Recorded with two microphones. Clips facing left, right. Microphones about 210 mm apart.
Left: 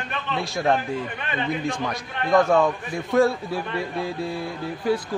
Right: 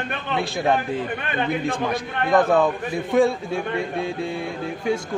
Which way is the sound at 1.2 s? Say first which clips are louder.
Right 1 dB; 55° right (ahead or behind).